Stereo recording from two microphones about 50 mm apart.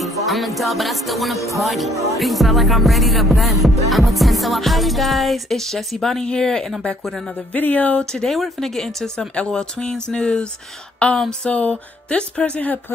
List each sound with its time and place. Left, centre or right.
0.0 s music: centre
7.5 s speech: left
8.0 s a sound: centre
8.4 s music: centre
9.5 s a sound: centre
11.1 s speech: centre